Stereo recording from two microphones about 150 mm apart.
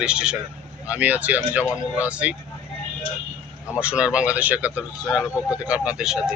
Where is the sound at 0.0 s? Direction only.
5° right (ahead or behind).